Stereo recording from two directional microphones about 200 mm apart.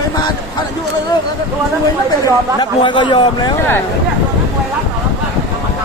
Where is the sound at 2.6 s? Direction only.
25° left (ahead or behind).